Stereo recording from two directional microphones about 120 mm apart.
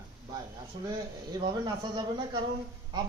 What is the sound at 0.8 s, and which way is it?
Speech, 35° right (ahead or behind).